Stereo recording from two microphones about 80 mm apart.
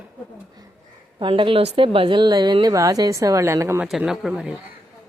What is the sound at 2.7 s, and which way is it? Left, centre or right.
A woman's voice, right.